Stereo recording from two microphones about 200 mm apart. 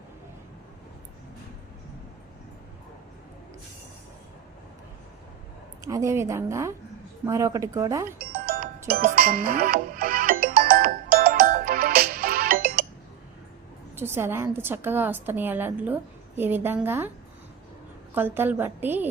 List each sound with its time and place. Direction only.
5.8 s a woman's voice: 15° right (ahead or behind)
8.3 s music: 45° right (ahead or behind)
13.9 s a woman's voice: 10° right (ahead or behind)
18.1 s a woman's voice: 10° right (ahead or behind)